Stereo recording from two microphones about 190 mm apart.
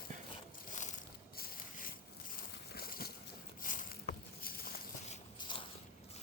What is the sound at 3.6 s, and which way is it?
Vehicle, 45° left (ahead or behind).